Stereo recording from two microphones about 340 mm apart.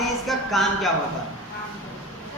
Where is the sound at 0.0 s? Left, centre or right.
Centre.